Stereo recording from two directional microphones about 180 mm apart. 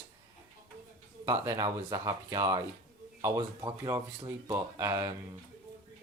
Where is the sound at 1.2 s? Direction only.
20° right (ahead or behind).